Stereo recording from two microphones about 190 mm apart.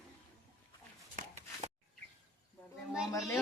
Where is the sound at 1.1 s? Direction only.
40° right (ahead or behind).